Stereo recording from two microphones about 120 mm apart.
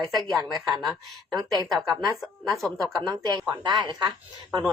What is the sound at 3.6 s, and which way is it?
Speech, 35° right (ahead or behind).